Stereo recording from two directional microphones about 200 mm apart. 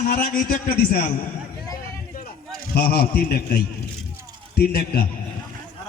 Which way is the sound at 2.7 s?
50° left (ahead or behind).